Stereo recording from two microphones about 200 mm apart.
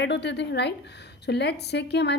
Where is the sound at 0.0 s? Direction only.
60° left (ahead or behind).